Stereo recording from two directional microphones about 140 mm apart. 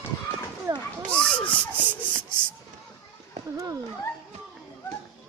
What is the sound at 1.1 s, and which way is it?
Speech, 10° left (ahead or behind).